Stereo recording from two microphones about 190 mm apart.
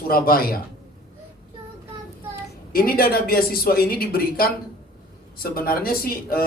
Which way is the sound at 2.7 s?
50° left (ahead or behind).